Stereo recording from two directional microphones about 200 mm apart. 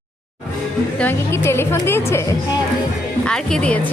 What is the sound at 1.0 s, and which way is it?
A woman's voice, 10° left (ahead or behind).